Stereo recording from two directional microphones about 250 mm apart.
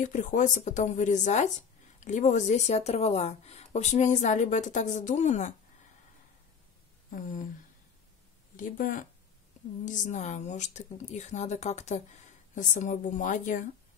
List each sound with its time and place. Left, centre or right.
0.0 s speech: left
7.1 s a sound: left
8.5 s speech: left